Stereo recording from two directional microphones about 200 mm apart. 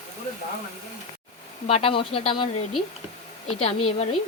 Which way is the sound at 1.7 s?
30° left (ahead or behind).